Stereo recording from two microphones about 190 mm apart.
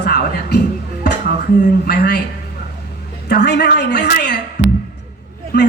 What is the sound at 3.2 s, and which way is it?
Speech, 60° left (ahead or behind).